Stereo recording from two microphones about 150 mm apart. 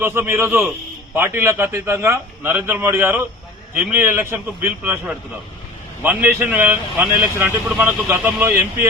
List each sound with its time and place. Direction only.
0.0 s a man's voice: 15° right (ahead or behind)